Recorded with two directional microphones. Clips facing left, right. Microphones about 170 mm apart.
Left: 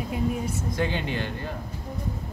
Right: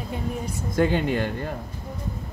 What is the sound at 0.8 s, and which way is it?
Speech, 50° right (ahead or behind).